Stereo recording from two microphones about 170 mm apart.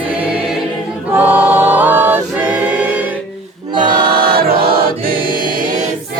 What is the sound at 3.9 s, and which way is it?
Choir, 60° right (ahead or behind).